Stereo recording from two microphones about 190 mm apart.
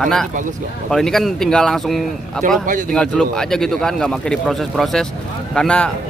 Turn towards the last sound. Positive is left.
turn(degrees=5)  # may be behind; listen again after turning